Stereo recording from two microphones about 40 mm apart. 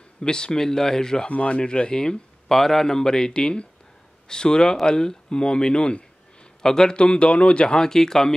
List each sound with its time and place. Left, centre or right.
0.2 s speech: left
1.3 s speech: left; by 8.4 s centre